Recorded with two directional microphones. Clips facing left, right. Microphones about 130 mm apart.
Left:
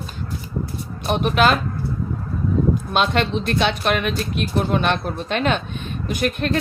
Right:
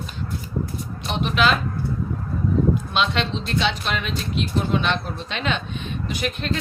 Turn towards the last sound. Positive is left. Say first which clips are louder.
# left 5 dB
turn(degrees=50)  # may be behind; listen again after turning